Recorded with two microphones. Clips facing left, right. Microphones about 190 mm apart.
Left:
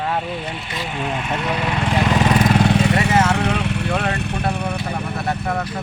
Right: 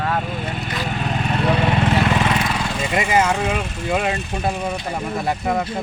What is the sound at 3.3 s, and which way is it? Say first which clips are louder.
Speech: left 2 dB; 65° left (ahead or behind).